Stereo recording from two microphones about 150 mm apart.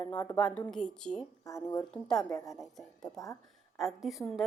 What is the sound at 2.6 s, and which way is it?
Speech, centre (ahead or behind).